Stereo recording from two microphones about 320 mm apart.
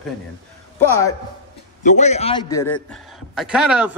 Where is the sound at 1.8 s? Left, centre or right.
Left.